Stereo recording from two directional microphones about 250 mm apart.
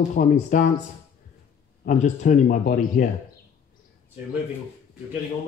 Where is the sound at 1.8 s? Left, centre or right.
Left.